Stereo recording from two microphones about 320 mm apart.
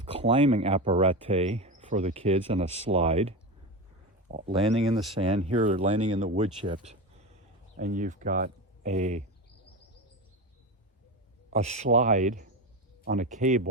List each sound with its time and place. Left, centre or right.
0.0 s speech: centre
11.5 s speech: right